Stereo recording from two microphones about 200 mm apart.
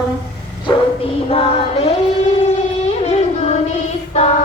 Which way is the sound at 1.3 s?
30° left (ahead or behind).